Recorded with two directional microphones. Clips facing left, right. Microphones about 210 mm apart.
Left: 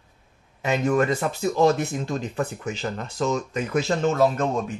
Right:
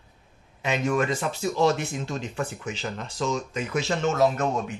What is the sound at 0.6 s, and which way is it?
A man's voice, 40° left (ahead or behind).